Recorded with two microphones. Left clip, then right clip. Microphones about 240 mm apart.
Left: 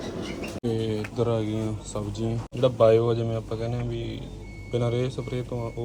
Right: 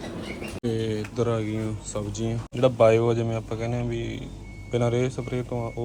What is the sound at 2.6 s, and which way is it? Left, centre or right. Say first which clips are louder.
A man's voice: right 1 dB; centre.